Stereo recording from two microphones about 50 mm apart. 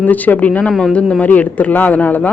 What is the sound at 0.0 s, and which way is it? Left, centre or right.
A woman's voice, left.